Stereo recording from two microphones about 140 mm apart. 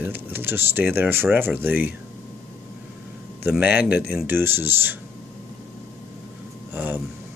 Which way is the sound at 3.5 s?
10° right (ahead or behind).